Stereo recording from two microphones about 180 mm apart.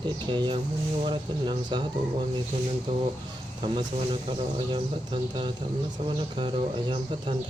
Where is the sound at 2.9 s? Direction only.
25° right (ahead or behind).